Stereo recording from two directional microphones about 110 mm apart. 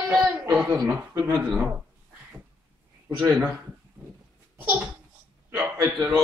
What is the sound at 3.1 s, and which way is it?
Speech, 5° right (ahead or behind).